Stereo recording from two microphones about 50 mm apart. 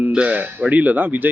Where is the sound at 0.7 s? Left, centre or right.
Right.